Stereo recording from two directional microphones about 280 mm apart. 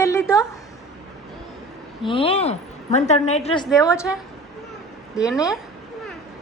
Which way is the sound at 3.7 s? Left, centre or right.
Centre.